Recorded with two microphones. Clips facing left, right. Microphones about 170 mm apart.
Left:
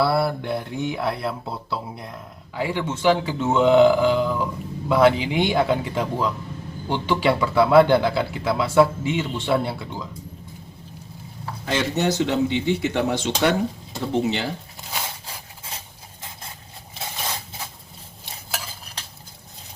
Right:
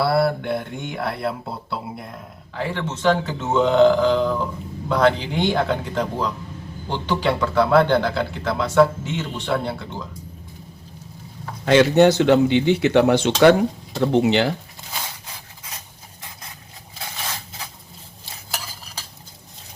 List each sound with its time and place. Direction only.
0.0 s a man's voice: centre (ahead or behind)
2.6 s a man's voice: 10° left (ahead or behind)
11.6 s speech: 75° right (ahead or behind)